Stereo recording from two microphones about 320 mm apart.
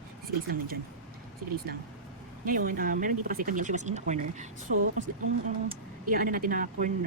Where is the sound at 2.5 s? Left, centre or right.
Right.